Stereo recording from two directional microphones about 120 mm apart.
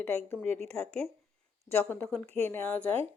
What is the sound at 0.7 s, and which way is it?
A woman's voice, 5° left (ahead or behind).